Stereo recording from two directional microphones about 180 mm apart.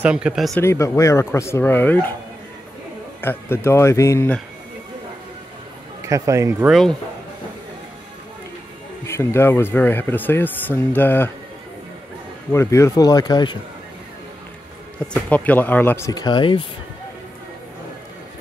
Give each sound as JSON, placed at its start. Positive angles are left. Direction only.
{"t": 0.0, "sound": "speech", "side_deg": -5}
{"t": 0.6, "sound": "speech", "side_deg": 15}
{"t": 3.2, "sound": "speech", "side_deg": 10}
{"t": 6.0, "sound": "speech", "side_deg": -15}
{"t": 9.0, "sound": "speech", "side_deg": 15}
{"t": 12.5, "sound": "speech", "side_deg": 15}
{"t": 15.2, "sound": "speech", "side_deg": 10}